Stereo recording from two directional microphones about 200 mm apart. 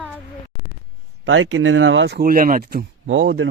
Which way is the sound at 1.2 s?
75° right (ahead or behind).